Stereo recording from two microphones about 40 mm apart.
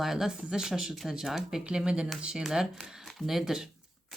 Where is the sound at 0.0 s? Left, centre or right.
Centre.